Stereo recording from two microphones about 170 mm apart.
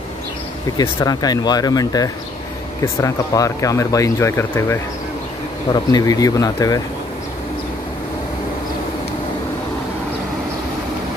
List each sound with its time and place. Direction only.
0.7 s speech: 20° left (ahead or behind)